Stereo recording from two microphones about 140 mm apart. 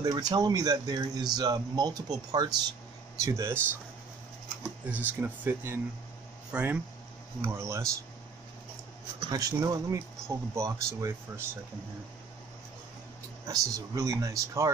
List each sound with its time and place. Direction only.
0.0 s speech: 30° right (ahead or behind)
4.8 s speech: 10° right (ahead or behind)
7.4 s speech: 20° right (ahead or behind)
9.3 s speech: 25° right (ahead or behind)
13.5 s speech: 25° right (ahead or behind)